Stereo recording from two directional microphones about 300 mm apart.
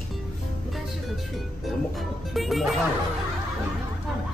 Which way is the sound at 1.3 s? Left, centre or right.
Centre.